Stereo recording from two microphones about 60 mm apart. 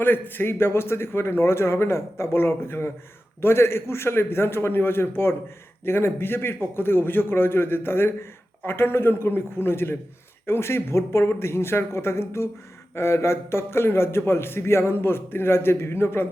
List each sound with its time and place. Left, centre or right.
0.0 s a man's voice: left